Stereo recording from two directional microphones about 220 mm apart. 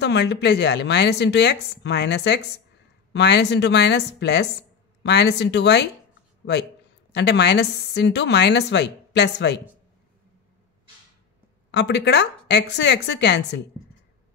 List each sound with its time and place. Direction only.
0.0 s a woman's voice: 50° left (ahead or behind)
7.2 s a woman's voice: 50° left (ahead or behind)
11.7 s a woman's voice: 50° left (ahead or behind)